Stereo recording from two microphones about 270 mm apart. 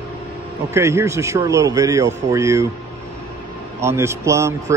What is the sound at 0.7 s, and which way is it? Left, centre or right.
Speech, centre.